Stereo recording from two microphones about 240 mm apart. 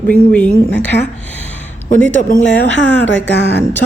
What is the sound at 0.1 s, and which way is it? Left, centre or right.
Speech, centre.